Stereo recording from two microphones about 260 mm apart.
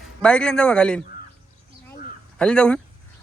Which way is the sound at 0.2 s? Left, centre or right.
Centre.